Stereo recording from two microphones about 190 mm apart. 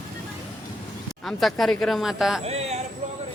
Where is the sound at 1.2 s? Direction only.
Centre (ahead or behind).